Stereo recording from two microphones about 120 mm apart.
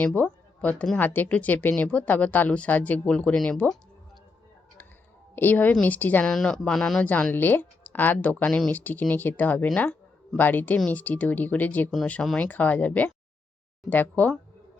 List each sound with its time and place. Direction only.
0.0 s speech: 15° left (ahead or behind)
5.3 s a woman's voice: 15° left (ahead or behind)